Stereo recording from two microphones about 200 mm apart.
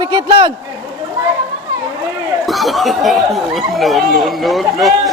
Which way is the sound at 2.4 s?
Centre (ahead or behind).